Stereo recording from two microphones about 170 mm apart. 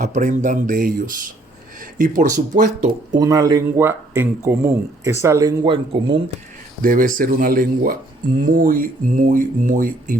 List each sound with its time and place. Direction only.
0.0 s speech: 45° right (ahead or behind)
3.1 s speech: 20° right (ahead or behind)
6.8 s speech: 55° right (ahead or behind)